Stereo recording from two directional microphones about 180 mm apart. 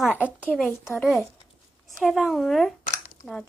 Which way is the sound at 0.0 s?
10° left (ahead or behind).